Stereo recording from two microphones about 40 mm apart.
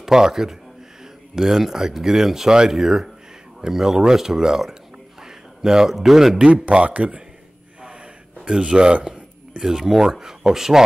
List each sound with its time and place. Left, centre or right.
0.0 s a man's voice: centre
6.3 s a man's voice: right
8.5 s a man's voice: right
9.6 s speech: centre